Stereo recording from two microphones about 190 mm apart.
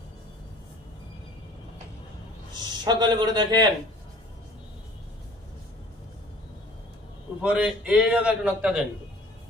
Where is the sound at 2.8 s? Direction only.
20° right (ahead or behind).